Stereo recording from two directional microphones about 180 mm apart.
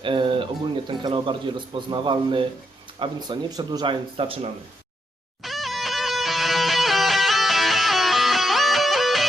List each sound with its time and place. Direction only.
0.0 s a sound: 30° right (ahead or behind)
0.9 s a man's voice: 25° right (ahead or behind)
5.4 s music: centre (ahead or behind)